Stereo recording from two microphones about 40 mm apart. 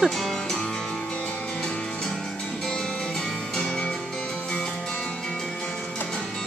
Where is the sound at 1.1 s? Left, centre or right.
Left.